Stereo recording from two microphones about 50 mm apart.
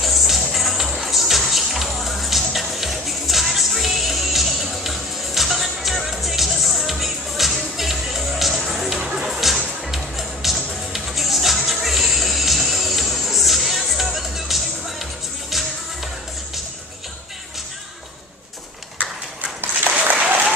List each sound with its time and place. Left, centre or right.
0.0 s music: centre
19.0 s clip-clop: right
20.2 s applause: right